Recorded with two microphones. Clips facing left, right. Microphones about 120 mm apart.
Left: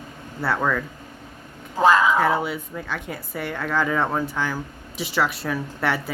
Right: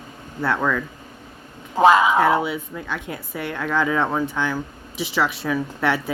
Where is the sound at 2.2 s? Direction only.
Centre (ahead or behind).